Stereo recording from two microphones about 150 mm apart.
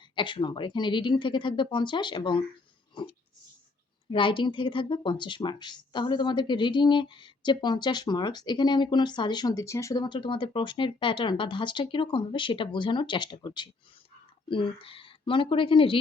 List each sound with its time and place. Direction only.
0.2 s speech: 35° left (ahead or behind)